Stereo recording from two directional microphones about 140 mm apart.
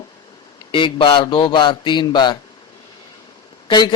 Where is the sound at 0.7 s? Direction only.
35° left (ahead or behind).